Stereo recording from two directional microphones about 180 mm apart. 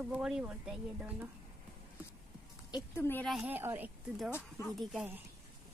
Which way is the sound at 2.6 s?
20° left (ahead or behind).